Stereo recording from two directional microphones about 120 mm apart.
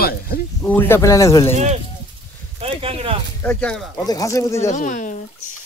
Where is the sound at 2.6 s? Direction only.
55° right (ahead or behind).